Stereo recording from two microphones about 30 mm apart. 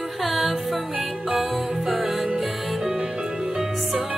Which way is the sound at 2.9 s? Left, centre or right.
Right.